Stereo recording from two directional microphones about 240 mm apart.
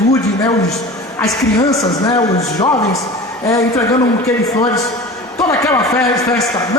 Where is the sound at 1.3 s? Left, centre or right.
Centre.